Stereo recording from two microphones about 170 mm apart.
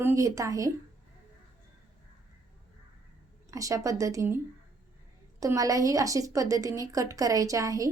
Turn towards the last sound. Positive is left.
turn(degrees=-20)  # may be behind; listen again after turning